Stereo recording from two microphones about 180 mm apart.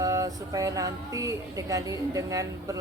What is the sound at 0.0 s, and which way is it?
Speech, 20° right (ahead or behind).